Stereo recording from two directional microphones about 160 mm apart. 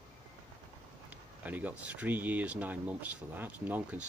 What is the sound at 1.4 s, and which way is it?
Speech, 10° right (ahead or behind).